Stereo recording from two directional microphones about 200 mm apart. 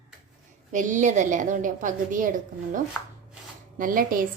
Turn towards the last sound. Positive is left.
turn(degrees=-45)  # may be behind; listen again after turning